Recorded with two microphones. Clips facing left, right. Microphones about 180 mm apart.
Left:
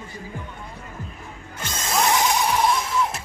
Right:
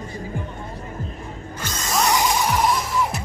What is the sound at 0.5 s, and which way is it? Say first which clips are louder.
Music: right 5 dB; 40° right (ahead or behind).